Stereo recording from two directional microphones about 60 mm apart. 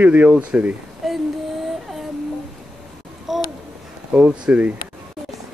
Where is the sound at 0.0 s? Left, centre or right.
Right.